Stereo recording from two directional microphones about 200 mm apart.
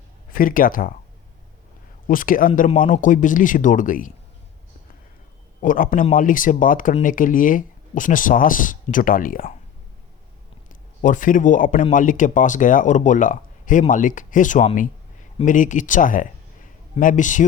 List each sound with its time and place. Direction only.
0.3 s speech: 45° left (ahead or behind)
2.0 s speech: 45° left (ahead or behind)
5.5 s speech: 45° left (ahead or behind)
11.0 s speech: 40° left (ahead or behind)